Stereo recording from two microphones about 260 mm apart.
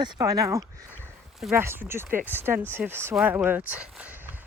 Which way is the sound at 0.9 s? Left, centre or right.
Centre.